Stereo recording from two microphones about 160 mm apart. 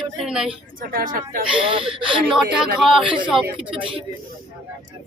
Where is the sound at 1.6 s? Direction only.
35° right (ahead or behind).